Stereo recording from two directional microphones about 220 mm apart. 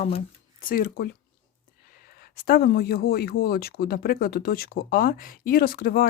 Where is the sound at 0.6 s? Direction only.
45° left (ahead or behind).